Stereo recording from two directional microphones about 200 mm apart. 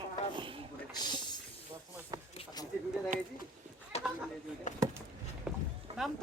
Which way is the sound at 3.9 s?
30° left (ahead or behind).